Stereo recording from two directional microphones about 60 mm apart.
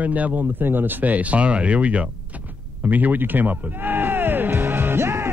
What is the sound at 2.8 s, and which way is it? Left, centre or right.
Music, right.